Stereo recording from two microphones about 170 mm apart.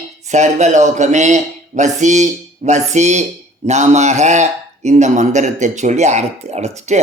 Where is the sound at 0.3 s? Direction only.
45° right (ahead or behind).